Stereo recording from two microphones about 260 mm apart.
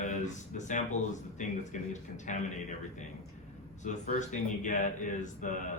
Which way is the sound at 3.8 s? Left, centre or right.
Left.